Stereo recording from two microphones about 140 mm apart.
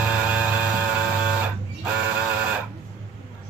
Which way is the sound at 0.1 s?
10° right (ahead or behind).